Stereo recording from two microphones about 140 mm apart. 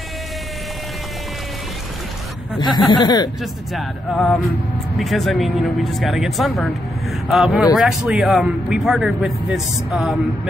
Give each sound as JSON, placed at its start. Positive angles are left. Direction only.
{"t": 2.9, "sound": "speech", "side_deg": 30}
{"t": 3.7, "sound": "a man's voice", "side_deg": 0}